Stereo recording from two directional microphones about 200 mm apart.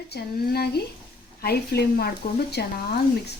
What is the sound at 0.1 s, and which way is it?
Speech, 55° left (ahead or behind).